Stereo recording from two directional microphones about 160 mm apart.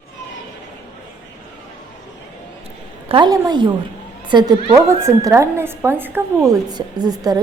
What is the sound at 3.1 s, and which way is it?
A woman's voice, 25° right (ahead or behind).